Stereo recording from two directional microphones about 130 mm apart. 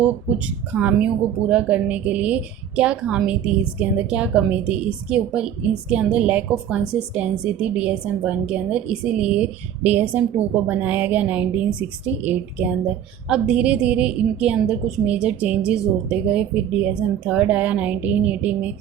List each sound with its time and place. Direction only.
0.0 s a woman's voice: 15° right (ahead or behind)